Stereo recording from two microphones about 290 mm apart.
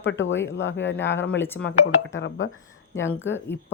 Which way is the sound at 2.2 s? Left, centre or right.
Left.